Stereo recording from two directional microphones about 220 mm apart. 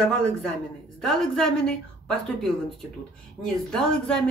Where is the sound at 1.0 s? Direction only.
Centre (ahead or behind).